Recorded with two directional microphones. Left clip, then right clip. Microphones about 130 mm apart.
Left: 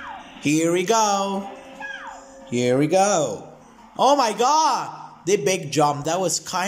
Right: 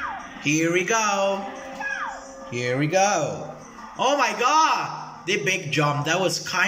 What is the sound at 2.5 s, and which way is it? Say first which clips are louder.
A man's voice: left 4 dB; 40° left (ahead or behind).